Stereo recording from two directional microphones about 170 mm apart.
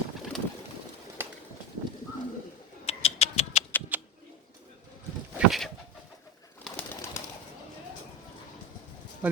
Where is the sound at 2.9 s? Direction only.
35° left (ahead or behind).